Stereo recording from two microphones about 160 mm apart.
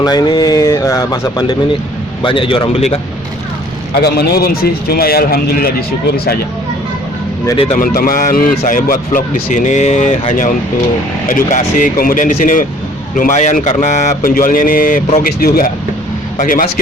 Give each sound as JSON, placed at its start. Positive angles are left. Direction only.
{"t": 0.0, "sound": "speech", "side_deg": 25}
{"t": 3.9, "sound": "speech", "side_deg": 85}
{"t": 7.4, "sound": "speech", "side_deg": 30}
{"t": 7.8, "sound": "a man's voice", "side_deg": 60}